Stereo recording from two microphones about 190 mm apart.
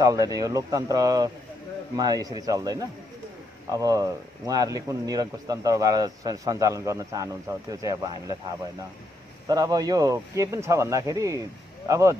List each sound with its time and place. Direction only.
0.0 s speech: 20° right (ahead or behind)
9.5 s speech: 20° right (ahead or behind)